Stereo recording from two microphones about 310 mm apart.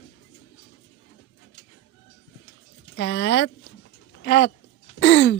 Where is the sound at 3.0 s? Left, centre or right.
Left.